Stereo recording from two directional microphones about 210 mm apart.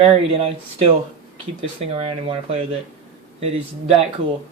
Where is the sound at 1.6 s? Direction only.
25° right (ahead or behind).